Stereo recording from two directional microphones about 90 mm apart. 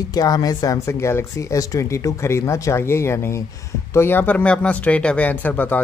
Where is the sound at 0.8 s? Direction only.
30° left (ahead or behind).